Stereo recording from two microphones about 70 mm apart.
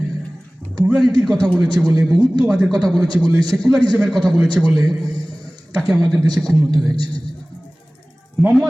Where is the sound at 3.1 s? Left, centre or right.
Right.